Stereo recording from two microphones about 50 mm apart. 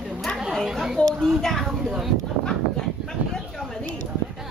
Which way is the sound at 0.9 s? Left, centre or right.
Centre.